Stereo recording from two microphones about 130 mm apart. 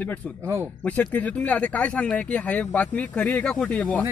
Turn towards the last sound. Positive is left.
turn(degrees=10)  # may be behind; listen again after turning